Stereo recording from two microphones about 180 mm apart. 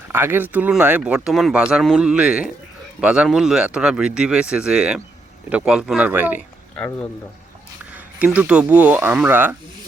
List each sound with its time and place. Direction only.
0.1 s speech: 10° right (ahead or behind)
6.7 s speech: 10° left (ahead or behind)
7.9 s speech: 5° right (ahead or behind)